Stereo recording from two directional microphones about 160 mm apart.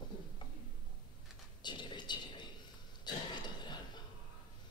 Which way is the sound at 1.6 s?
30° left (ahead or behind).